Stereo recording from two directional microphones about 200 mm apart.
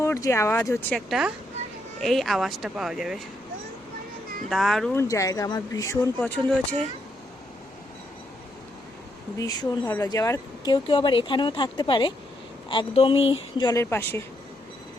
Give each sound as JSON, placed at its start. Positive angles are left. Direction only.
{"t": 0.0, "sound": "speech", "side_deg": 15}
{"t": 4.4, "sound": "speech", "side_deg": 0}
{"t": 4.9, "sound": "speech", "side_deg": 15}
{"t": 9.4, "sound": "speech", "side_deg": 15}